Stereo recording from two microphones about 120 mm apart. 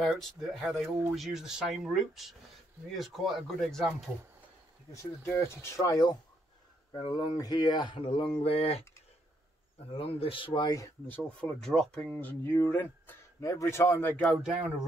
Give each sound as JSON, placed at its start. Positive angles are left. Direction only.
{"t": 0.0, "sound": "speech", "side_deg": 0}
{"t": 5.2, "sound": "speech", "side_deg": 20}
{"t": 9.9, "sound": "speech", "side_deg": 50}
{"t": 11.1, "sound": "speech", "side_deg": 5}
{"t": 12.1, "sound": "speech", "side_deg": 15}
{"t": 14.2, "sound": "speech", "side_deg": 0}